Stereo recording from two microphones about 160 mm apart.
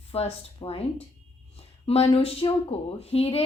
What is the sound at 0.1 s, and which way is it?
Speech, 40° left (ahead or behind).